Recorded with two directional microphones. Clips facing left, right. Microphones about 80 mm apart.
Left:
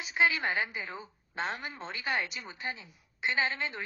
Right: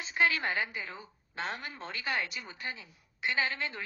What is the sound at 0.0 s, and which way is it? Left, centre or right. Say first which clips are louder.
A woman's voice: left 1 dB; centre.